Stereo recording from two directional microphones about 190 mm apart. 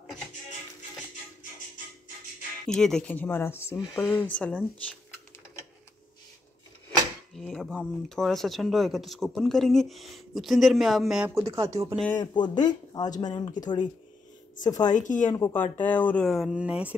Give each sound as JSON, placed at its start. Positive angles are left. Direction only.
{"t": 2.6, "sound": "speech", "side_deg": 5}
{"t": 7.3, "sound": "speech", "side_deg": 5}
{"t": 11.3, "sound": "speech", "side_deg": -15}
{"t": 12.2, "sound": "speech", "side_deg": 20}
{"t": 15.0, "sound": "speech", "side_deg": 40}
{"t": 15.3, "sound": "speech", "side_deg": 15}